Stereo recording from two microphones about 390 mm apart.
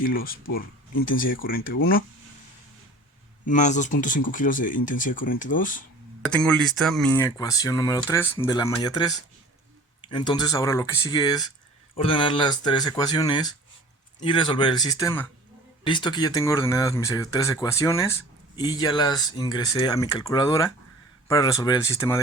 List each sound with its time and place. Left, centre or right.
0.0 s speech: left
3.4 s speech: centre
6.2 s a man's voice: centre